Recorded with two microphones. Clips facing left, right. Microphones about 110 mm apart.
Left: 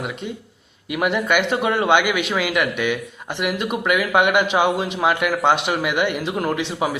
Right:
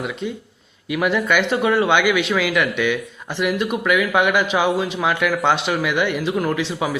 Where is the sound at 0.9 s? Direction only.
15° left (ahead or behind).